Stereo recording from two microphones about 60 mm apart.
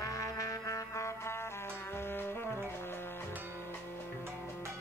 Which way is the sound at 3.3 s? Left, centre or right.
Right.